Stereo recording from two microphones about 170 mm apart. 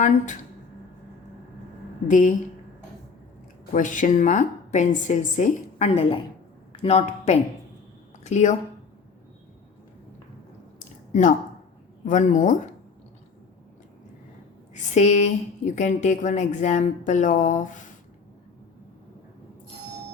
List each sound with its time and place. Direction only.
2.0 s a woman's voice: 50° left (ahead or behind)
3.7 s a woman's voice: 50° left (ahead or behind)
5.9 s a woman's voice: 35° left (ahead or behind)
10.8 s a sound: 45° left (ahead or behind)
12.0 s a woman's voice: 45° left (ahead or behind)
14.7 s a woman's voice: 40° left (ahead or behind)